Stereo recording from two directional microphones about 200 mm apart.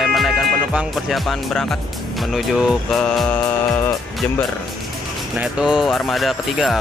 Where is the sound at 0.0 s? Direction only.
Centre (ahead or behind).